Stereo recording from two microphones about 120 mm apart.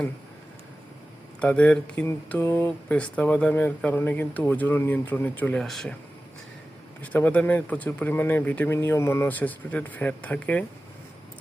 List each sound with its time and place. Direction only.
1.4 s speech: 10° left (ahead or behind)
5.6 s a man's voice: centre (ahead or behind)
7.0 s speech: 10° left (ahead or behind)